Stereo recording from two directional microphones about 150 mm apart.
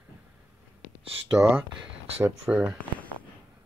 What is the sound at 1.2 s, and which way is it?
Speech, 10° right (ahead or behind).